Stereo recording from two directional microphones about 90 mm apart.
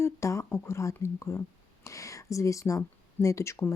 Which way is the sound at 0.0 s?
35° left (ahead or behind).